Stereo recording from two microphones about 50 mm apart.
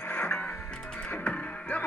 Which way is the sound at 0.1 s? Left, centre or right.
Left.